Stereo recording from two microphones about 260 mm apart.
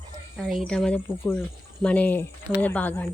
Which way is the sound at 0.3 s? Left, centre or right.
Centre.